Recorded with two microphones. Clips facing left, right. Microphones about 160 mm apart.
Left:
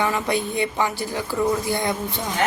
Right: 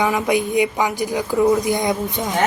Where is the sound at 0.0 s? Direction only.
15° right (ahead or behind).